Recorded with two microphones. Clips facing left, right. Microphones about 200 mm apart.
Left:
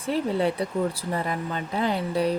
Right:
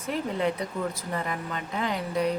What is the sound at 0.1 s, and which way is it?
A woman's voice, 30° left (ahead or behind).